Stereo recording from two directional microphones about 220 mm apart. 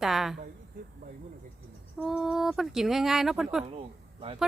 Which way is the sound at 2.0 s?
Centre (ahead or behind).